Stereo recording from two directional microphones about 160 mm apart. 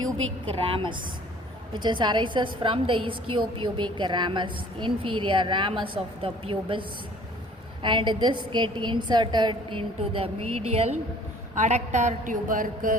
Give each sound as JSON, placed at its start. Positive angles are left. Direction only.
{"t": 0.4, "sound": "a woman's voice", "side_deg": -30}